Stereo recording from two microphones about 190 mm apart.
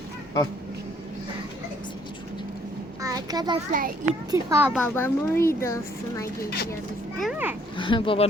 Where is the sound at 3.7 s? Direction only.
45° right (ahead or behind).